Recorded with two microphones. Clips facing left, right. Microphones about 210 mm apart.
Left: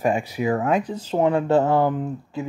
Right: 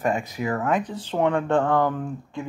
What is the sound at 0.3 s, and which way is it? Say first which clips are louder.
Speech: left 3 dB; 15° left (ahead or behind).